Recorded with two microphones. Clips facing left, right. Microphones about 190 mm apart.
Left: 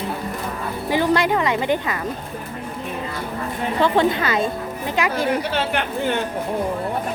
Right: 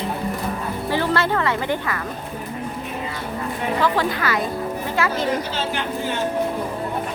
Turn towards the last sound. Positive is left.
turn(degrees=60)  # may be behind; listen again after turning